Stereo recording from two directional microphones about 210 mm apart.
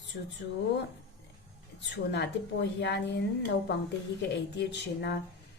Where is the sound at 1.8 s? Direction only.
55° left (ahead or behind).